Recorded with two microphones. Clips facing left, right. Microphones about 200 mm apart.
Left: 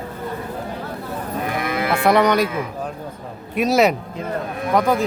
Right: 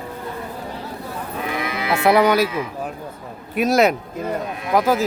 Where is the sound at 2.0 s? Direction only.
5° right (ahead or behind).